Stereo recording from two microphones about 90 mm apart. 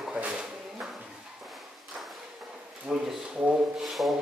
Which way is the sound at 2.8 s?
5° right (ahead or behind).